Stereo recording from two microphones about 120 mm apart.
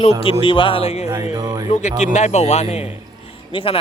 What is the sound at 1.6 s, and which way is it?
Speech, 75° left (ahead or behind).